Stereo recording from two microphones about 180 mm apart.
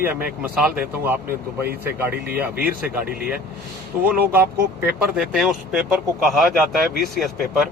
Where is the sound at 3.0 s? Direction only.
55° right (ahead or behind).